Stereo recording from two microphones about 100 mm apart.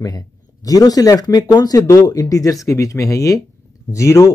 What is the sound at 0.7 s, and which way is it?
Speech, 40° left (ahead or behind).